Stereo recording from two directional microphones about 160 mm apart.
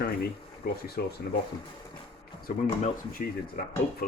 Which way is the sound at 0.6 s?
70° left (ahead or behind).